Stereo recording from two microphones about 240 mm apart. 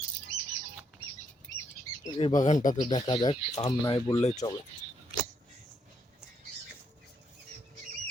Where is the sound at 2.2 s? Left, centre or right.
Left.